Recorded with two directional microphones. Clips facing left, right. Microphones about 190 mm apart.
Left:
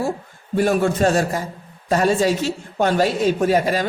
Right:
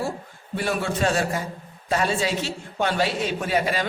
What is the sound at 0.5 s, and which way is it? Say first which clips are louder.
A woman's voice: left 8 dB; 45° left (ahead or behind).